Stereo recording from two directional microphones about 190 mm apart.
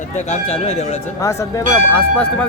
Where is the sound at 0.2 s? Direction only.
35° left (ahead or behind).